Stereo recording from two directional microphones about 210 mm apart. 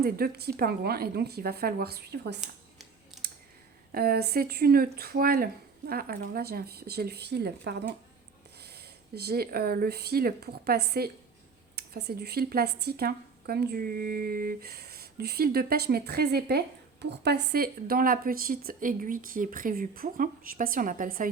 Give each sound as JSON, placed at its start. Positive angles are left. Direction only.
{"t": 0.0, "sound": "speech", "side_deg": -50}
{"t": 3.1, "sound": "clicking", "side_deg": 0}
{"t": 3.9, "sound": "speech", "side_deg": -45}